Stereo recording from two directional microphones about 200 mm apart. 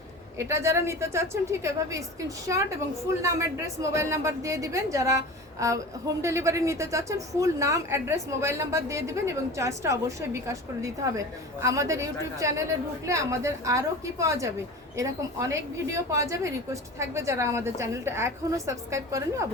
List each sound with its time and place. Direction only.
0.3 s speech: 15° right (ahead or behind)
3.8 s speech: 15° right (ahead or behind)